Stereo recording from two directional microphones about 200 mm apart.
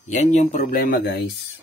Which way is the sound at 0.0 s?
35° left (ahead or behind).